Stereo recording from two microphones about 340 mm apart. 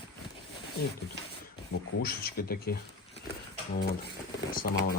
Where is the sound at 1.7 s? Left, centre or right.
Left.